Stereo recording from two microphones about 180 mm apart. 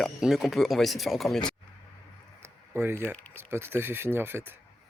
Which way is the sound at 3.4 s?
15° right (ahead or behind).